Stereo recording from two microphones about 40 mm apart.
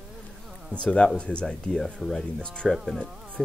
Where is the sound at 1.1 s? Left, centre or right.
Left.